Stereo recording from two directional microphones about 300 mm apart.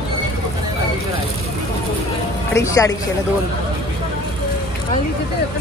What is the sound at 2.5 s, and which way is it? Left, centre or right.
Speech, centre.